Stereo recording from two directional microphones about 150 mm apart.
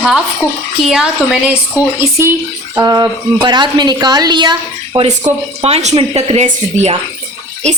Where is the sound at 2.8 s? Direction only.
25° right (ahead or behind).